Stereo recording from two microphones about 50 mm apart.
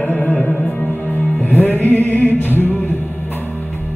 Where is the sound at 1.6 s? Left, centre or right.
Left.